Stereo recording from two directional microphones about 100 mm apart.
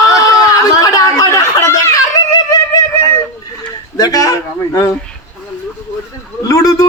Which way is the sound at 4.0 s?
35° left (ahead or behind).